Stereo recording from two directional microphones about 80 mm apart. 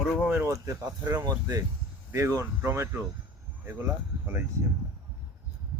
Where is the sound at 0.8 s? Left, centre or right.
Right.